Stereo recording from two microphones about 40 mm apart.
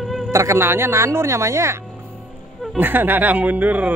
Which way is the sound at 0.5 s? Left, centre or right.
Right.